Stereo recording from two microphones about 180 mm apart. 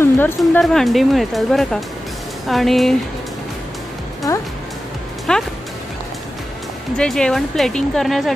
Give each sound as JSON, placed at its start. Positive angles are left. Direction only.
{"t": 0.0, "sound": "music", "side_deg": 15}
{"t": 0.4, "sound": "speech", "side_deg": 0}
{"t": 4.3, "sound": "speech", "side_deg": 15}
{"t": 5.3, "sound": "speech", "side_deg": 5}
{"t": 7.0, "sound": "speech", "side_deg": 5}